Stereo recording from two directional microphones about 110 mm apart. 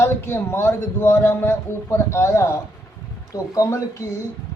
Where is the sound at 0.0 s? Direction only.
20° left (ahead or behind).